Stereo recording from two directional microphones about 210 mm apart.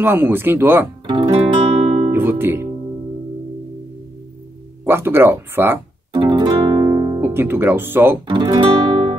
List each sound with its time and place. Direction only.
0.0 s speech: 10° right (ahead or behind)
1.0 s guitar: 20° right (ahead or behind)
2.0 s guitar: 10° right (ahead or behind)
4.8 s music: 10° right (ahead or behind)
8.3 s guitar: 20° right (ahead or behind)